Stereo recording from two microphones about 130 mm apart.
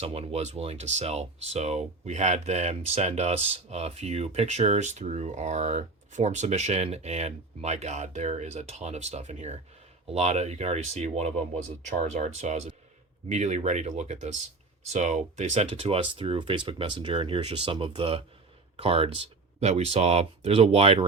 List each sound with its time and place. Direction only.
0.0 s speech: 50° right (ahead or behind)